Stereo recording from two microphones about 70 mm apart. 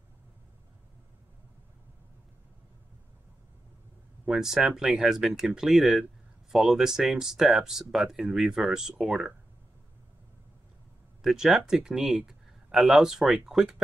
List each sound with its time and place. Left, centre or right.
4.3 s speech: centre
11.2 s speech: centre